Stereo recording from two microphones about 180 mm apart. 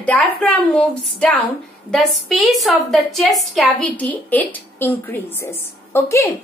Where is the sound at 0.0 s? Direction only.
5° left (ahead or behind).